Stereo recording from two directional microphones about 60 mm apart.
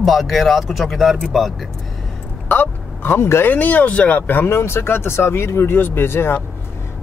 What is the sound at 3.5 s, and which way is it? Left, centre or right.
A man's voice, left.